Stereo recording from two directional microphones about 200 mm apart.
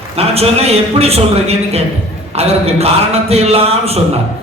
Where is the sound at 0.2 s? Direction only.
30° right (ahead or behind).